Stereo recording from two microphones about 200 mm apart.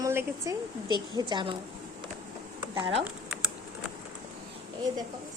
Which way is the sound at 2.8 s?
30° right (ahead or behind).